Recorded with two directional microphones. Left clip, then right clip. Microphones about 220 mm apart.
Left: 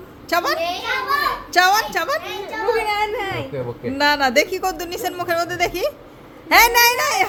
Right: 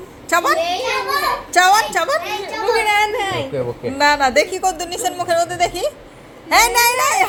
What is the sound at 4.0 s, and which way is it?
Speech, 25° left (ahead or behind).